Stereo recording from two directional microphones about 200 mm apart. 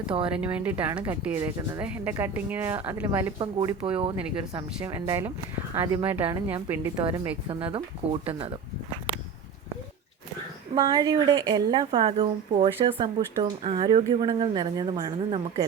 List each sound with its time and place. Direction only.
0.3 s speech: 5° right (ahead or behind)
3.3 s a woman's voice: 25° right (ahead or behind)
4.8 s a woman's voice: 15° right (ahead or behind)
10.8 s a woman's voice: 20° right (ahead or behind)